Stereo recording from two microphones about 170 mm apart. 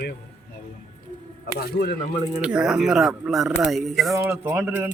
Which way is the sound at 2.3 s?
5° right (ahead or behind).